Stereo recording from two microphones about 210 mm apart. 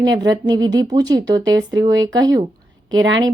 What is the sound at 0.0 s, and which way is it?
A woman's voice, 20° right (ahead or behind).